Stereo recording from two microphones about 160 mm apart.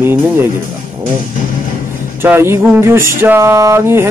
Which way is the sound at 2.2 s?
15° right (ahead or behind).